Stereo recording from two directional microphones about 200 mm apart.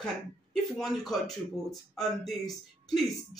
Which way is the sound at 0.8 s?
Centre (ahead or behind).